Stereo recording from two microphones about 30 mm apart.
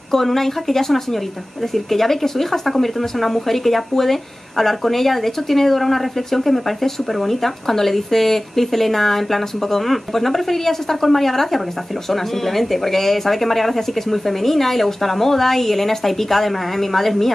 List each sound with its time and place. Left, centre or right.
0.1 s speech: centre